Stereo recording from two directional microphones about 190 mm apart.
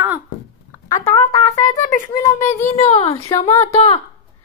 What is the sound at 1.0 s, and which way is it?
Speech, 15° left (ahead or behind).